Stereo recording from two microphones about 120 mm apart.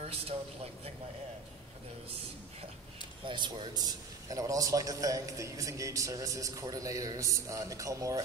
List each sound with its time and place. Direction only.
3.3 s a man's voice: 40° right (ahead or behind); by 8.2 s 25° right (ahead or behind)